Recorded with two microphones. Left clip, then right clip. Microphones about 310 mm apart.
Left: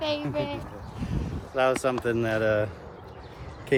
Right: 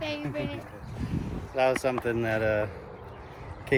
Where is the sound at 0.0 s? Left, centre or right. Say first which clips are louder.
Left 4 dB; centre.